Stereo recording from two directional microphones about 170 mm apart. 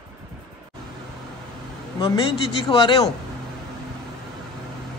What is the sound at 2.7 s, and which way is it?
Speech, 30° left (ahead or behind).